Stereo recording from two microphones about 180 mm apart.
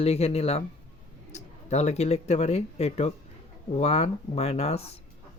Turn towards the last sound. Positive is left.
turn(degrees=35)  # may be behind; listen again after turning